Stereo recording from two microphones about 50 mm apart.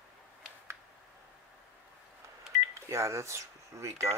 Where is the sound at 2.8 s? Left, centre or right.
Right.